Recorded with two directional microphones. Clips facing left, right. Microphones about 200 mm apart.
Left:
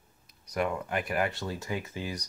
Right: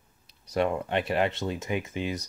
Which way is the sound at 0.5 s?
30° right (ahead or behind).